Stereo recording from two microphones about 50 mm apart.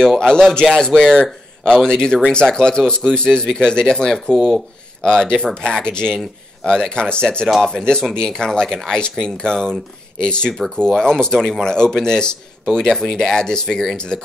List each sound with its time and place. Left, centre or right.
0.0 s a man's voice: centre
7.4 s a man's voice: centre